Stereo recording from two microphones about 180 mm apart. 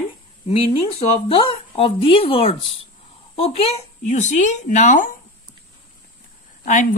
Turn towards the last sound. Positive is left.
turn(degrees=45)  # may be behind; listen again after turning